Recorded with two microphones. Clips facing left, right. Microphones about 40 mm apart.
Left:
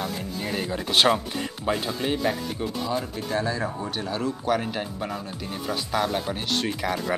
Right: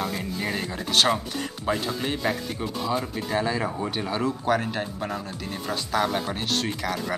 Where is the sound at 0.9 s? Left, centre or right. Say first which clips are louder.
Left 1 dB; centre.